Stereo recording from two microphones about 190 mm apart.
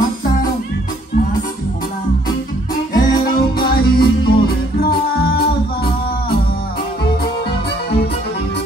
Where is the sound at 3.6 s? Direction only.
55° left (ahead or behind).